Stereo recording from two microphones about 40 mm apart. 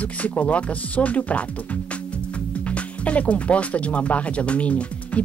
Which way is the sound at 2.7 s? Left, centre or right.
Left.